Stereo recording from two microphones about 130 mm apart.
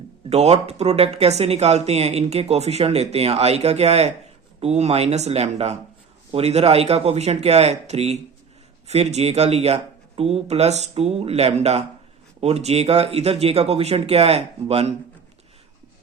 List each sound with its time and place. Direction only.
0.3 s speech: 55° right (ahead or behind)